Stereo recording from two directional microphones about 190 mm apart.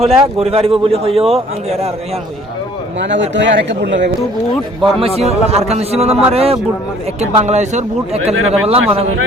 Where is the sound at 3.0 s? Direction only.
70° right (ahead or behind).